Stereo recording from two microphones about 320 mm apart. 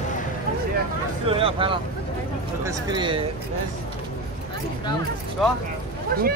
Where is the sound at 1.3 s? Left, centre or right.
Centre.